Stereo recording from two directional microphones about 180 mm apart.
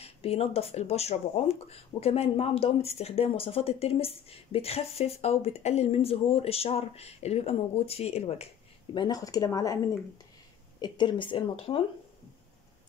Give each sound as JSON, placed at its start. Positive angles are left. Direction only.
{"t": 0.0, "sound": "speech", "side_deg": 35}
{"t": 8.9, "sound": "speech", "side_deg": 25}
{"t": 10.8, "sound": "speech", "side_deg": 25}